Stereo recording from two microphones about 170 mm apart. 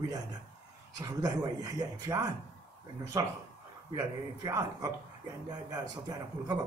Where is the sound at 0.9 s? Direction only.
20° right (ahead or behind).